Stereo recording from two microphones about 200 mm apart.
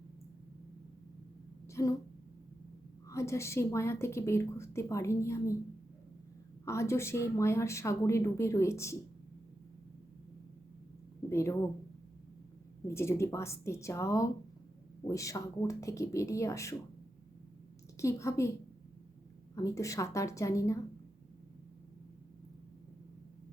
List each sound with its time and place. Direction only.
1.6 s a sound: 15° left (ahead or behind)
3.1 s a woman's voice: 15° left (ahead or behind)
6.7 s a woman's voice: 15° left (ahead or behind)
11.3 s speech: 15° left (ahead or behind)
12.9 s a woman's voice: 15° left (ahead or behind)
17.9 s a woman's voice: 15° left (ahead or behind)
19.5 s a woman's voice: 15° left (ahead or behind)